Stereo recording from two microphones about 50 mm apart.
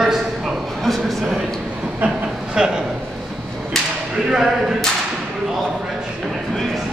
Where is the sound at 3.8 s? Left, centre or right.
Centre.